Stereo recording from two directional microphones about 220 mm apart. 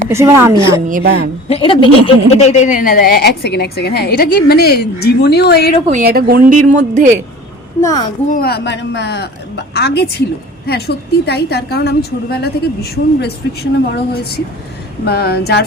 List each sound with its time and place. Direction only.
0.1 s a woman's voice: 10° right (ahead or behind)
0.9 s a woman's voice: 40° right (ahead or behind)
1.5 s a woman's voice: 25° left (ahead or behind); by 5.7 s 45° left (ahead or behind)
5.9 s a woman's voice: 45° right (ahead or behind)
7.8 s a child's voice: 15° left (ahead or behind)
8.3 s a woman's voice: 45° left (ahead or behind)